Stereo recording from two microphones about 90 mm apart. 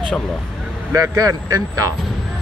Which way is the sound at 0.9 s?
40° right (ahead or behind).